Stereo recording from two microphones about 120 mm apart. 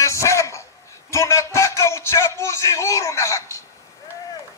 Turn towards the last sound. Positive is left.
turn(degrees=25)  # may be behind; listen again after turning